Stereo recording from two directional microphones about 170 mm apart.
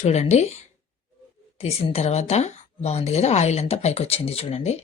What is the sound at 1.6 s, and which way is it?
Speech, 35° left (ahead or behind).